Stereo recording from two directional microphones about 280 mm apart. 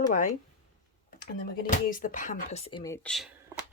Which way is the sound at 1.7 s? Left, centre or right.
Left.